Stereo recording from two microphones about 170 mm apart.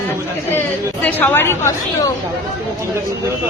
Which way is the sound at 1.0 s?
10° left (ahead or behind).